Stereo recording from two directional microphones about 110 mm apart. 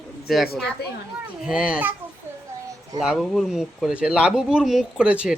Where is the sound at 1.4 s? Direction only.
10° right (ahead or behind).